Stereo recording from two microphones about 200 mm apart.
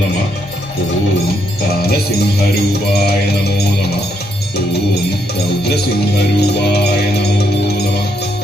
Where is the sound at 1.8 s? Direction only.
50° left (ahead or behind).